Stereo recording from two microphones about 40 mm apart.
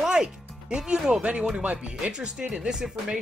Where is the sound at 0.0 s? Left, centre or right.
Centre.